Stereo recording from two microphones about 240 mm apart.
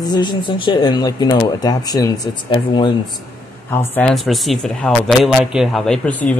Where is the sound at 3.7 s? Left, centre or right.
Centre.